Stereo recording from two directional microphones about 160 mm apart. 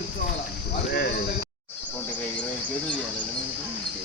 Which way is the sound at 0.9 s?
75° left (ahead or behind).